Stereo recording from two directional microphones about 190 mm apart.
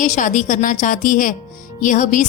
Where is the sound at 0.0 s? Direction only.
40° left (ahead or behind).